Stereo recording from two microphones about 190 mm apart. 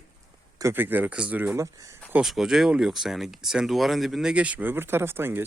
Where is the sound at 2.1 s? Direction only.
5° right (ahead or behind).